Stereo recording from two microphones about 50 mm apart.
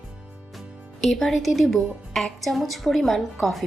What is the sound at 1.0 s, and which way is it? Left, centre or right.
A woman's voice, centre.